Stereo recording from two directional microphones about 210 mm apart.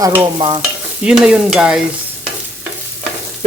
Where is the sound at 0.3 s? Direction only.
25° right (ahead or behind).